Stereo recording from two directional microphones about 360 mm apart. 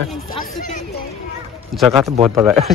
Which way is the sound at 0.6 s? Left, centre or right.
Centre.